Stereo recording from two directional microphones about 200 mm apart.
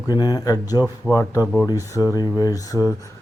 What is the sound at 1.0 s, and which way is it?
Speech, 5° left (ahead or behind).